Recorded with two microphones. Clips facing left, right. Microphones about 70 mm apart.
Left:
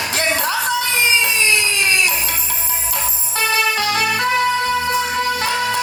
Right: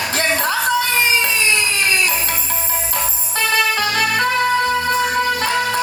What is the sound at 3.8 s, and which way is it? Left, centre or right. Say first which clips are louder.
Music: right 1 dB; right.